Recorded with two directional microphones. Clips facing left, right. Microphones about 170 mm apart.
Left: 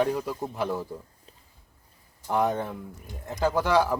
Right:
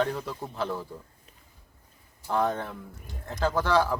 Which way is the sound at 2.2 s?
15° left (ahead or behind).